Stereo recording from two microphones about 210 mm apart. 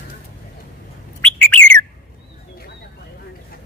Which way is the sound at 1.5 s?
5° left (ahead or behind).